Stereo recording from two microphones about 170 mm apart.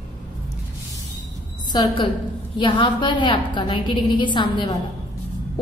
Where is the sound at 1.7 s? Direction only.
25° left (ahead or behind).